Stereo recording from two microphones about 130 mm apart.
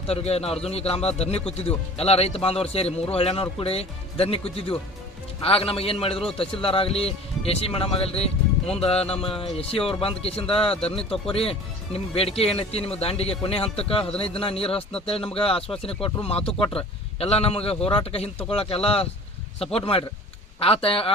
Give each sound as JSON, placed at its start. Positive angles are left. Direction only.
{"t": 0.1, "sound": "speech", "side_deg": 50}